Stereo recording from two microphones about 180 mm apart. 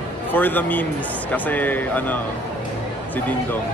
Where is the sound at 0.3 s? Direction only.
10° left (ahead or behind).